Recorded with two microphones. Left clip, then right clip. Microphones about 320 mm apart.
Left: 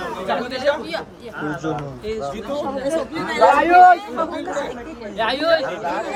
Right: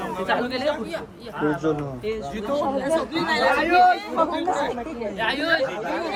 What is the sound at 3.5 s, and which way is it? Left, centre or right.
Speech, left.